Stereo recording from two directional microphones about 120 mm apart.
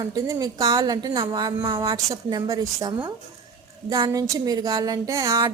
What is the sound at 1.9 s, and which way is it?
A woman's voice, 30° right (ahead or behind).